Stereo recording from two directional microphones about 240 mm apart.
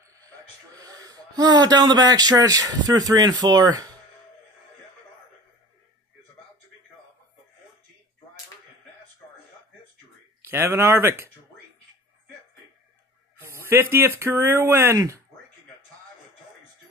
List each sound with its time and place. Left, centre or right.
0.1 s speech: centre
10.5 s speech: centre
13.5 s speech: centre